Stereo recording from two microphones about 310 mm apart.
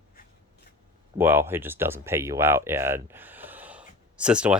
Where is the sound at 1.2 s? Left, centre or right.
Centre.